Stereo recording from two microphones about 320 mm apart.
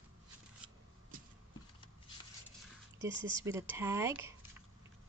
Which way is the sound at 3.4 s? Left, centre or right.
Centre.